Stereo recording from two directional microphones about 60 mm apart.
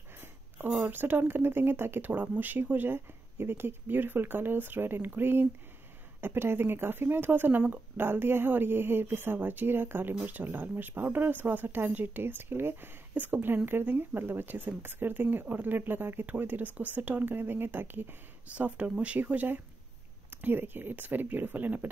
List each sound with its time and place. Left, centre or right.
0.7 s speech: right
18.5 s speech: right